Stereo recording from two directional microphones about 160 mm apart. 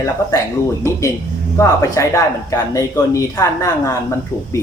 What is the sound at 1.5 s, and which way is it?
Speech, 20° left (ahead or behind).